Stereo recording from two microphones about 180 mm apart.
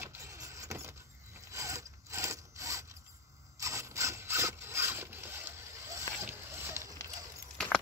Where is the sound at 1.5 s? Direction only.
15° right (ahead or behind).